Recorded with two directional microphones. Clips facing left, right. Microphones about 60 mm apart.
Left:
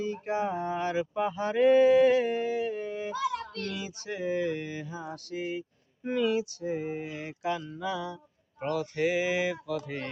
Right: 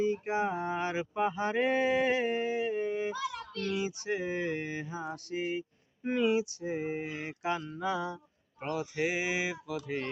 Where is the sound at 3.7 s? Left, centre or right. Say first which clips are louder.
Right 4 dB; right.